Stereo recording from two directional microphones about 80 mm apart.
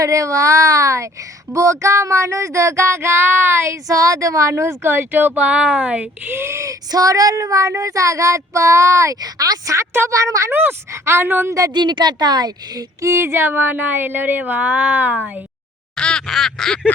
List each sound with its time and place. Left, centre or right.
0.0 s child singing: right; by 6.3 s centre
6.3 s child singing: right
10.5 s speech: right
11.7 s a woman's voice: right
13.0 s speech: right
16.0 s quack: centre